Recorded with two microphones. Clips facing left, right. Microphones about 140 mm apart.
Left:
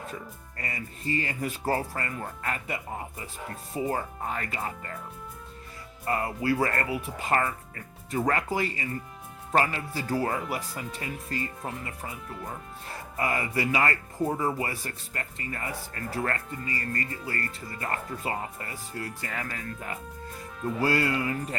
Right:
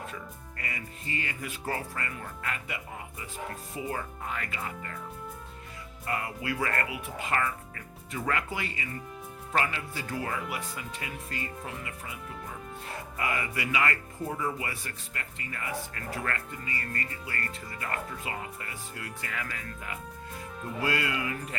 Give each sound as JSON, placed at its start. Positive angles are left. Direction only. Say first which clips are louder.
{"t": 0.1, "sound": "speech", "louder": "left 2 dB", "side_deg": 35}
{"t": 6.1, "sound": "speech", "louder": "left 6 dB", "side_deg": 35}